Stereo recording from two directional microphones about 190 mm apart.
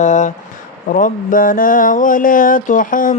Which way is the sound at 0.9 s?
45° left (ahead or behind).